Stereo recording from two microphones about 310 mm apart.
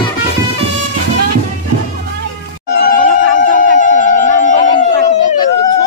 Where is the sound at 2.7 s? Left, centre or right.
Left.